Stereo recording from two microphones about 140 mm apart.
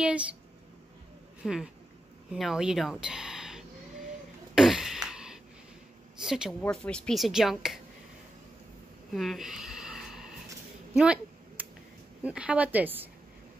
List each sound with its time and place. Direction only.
0.0 s a woman's voice: 10° right (ahead or behind)
1.4 s speech: 5° right (ahead or behind)
4.6 s a sound: 5° right (ahead or behind)
6.2 s speech: 5° right (ahead or behind)
9.1 s a sound: centre (ahead or behind)
12.2 s a woman's voice: 10° right (ahead or behind)